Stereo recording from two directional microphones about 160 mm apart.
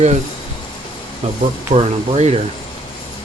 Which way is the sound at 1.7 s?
40° right (ahead or behind).